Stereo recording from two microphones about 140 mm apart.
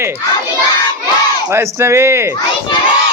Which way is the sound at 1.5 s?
20° right (ahead or behind).